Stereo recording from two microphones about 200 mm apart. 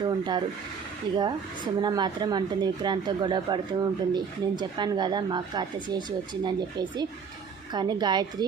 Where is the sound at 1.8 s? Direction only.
20° right (ahead or behind).